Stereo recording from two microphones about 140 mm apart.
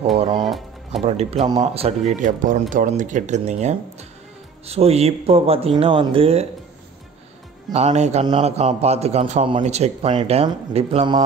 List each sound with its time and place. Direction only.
0.4 s music: centre (ahead or behind)
1.0 s speech: 50° right (ahead or behind)
7.7 s speech: 50° right (ahead or behind)